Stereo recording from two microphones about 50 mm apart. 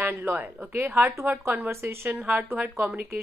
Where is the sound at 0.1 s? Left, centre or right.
Right.